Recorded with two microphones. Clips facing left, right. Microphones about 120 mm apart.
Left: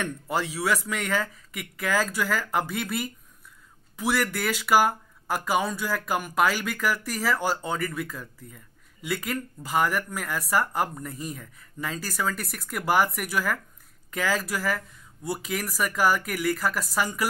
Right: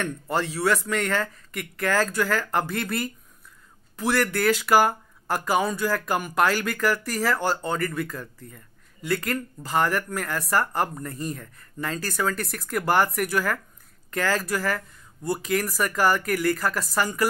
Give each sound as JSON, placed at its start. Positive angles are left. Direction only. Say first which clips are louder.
{"t": 0.0, "sound": "speech", "louder": "right 2 dB", "side_deg": 5}